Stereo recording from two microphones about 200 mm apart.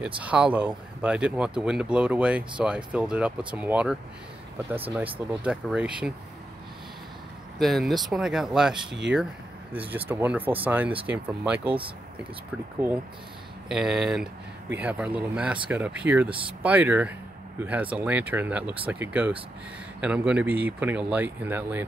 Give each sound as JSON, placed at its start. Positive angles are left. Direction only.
{"t": 0.2, "sound": "speech", "side_deg": -5}
{"t": 7.5, "sound": "speech", "side_deg": 0}
{"t": 13.7, "sound": "speech", "side_deg": 0}
{"t": 16.3, "sound": "speech", "side_deg": -25}
{"t": 16.6, "sound": "speech", "side_deg": -10}